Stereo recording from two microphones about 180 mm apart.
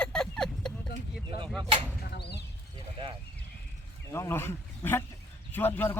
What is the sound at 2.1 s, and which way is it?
Speech, 65° left (ahead or behind).